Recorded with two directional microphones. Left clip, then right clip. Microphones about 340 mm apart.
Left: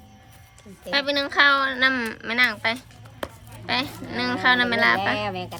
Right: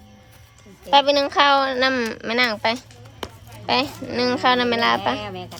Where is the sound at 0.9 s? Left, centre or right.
Centre.